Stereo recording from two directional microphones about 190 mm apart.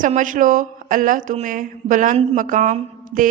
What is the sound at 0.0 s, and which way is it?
A woman's voice, 45° right (ahead or behind).